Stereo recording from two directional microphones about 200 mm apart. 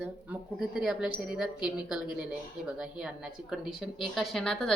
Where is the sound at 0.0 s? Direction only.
5° right (ahead or behind).